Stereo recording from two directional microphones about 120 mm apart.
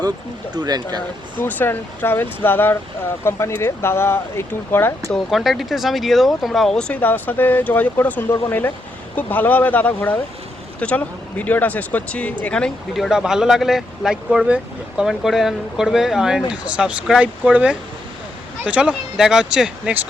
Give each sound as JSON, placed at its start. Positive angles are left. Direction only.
{"t": 0.5, "sound": "speech", "side_deg": -35}
{"t": 1.4, "sound": "speech", "side_deg": 15}
{"t": 5.1, "sound": "speech", "side_deg": 0}